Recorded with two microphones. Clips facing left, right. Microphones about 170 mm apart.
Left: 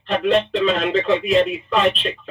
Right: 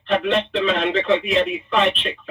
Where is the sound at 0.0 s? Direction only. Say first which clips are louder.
Left 2 dB; 40° left (ahead or behind).